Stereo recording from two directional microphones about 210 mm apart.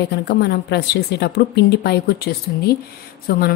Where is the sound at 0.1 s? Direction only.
50° left (ahead or behind).